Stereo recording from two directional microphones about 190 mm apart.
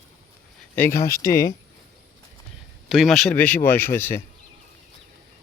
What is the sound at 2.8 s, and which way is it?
Speech, centre (ahead or behind).